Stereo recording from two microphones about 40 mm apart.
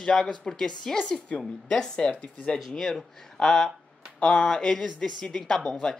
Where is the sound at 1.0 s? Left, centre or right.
Left.